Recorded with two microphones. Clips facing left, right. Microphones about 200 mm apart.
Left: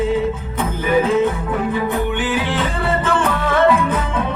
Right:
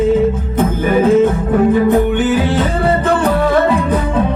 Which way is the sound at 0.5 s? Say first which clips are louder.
Right 2 dB; 45° right (ahead or behind).